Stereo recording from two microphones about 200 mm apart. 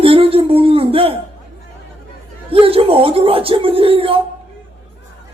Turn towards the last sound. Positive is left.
turn(degrees=-25)  # may be behind; listen again after turning